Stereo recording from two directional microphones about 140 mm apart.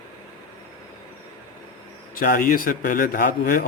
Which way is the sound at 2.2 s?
80° left.